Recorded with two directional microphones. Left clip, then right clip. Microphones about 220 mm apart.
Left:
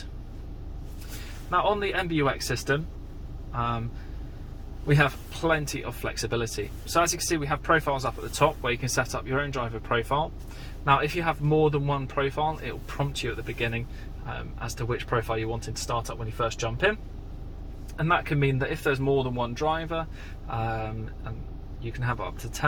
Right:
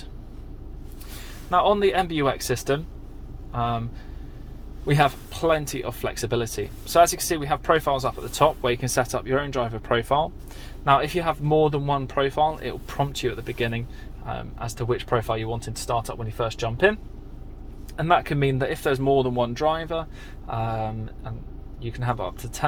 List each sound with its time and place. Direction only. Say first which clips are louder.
1.5 s speech: right 5 dB; 45° right (ahead or behind)
4.9 s speech: right 3 dB; 45° right (ahead or behind)
17.9 s speech: right 4 dB; 50° right (ahead or behind)